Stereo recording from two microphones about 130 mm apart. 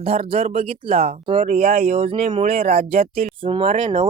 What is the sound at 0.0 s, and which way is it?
Speech, 45° right (ahead or behind).